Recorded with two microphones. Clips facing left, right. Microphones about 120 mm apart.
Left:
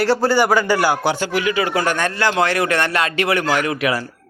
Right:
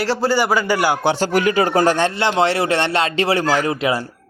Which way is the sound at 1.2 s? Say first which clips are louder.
Right 3 dB; 45° right (ahead or behind).